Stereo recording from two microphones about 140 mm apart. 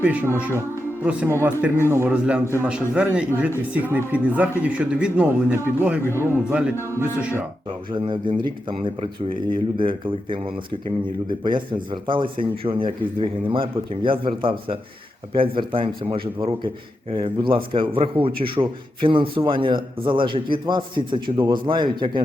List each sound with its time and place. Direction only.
0.0 s speech: 10° right (ahead or behind)
7.7 s speech: 35° right (ahead or behind)
17.1 s speech: 35° right (ahead or behind)